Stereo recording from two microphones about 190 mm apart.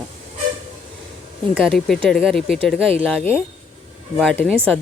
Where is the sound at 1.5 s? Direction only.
Centre (ahead or behind).